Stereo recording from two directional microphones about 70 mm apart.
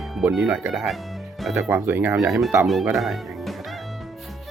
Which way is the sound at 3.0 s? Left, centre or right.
Centre.